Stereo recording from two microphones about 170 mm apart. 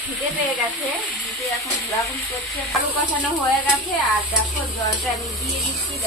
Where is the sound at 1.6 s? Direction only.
20° left (ahead or behind).